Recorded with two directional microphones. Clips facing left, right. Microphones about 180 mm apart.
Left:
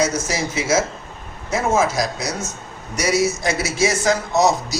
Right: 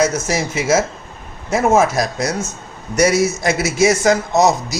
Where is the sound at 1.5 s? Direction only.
55° right (ahead or behind).